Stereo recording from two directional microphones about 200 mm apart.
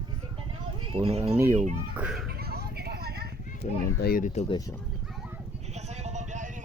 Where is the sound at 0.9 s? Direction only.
30° right (ahead or behind).